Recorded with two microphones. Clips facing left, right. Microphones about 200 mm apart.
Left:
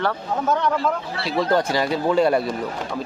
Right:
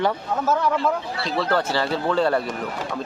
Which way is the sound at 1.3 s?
15° left (ahead or behind).